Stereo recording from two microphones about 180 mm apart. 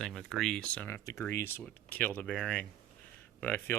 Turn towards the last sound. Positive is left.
turn(degrees=10)  # may be behind; listen again after turning